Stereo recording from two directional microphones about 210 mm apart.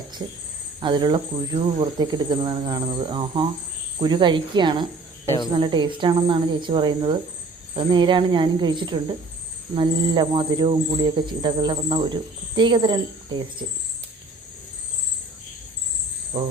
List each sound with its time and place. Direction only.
0.2 s a man's voice: 20° right (ahead or behind)